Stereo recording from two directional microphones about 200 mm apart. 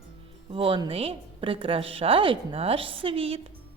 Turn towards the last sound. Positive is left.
turn(degrees=-30)  # may be behind; listen again after turning